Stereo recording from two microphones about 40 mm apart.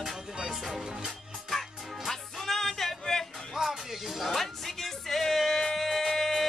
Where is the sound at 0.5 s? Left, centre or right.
Centre.